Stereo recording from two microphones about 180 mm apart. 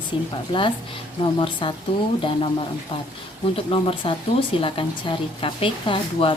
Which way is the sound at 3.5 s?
30° left (ahead or behind).